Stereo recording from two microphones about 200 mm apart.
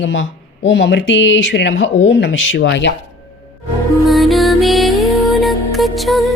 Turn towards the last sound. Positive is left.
turn(degrees=0)  # may be behind; listen again after turning